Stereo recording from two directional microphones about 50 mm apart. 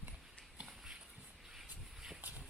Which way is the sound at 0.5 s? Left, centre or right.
Centre.